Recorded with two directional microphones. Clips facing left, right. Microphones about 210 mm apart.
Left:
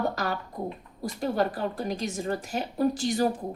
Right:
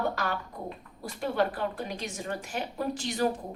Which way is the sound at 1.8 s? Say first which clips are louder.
Left 6 dB; 40° left (ahead or behind).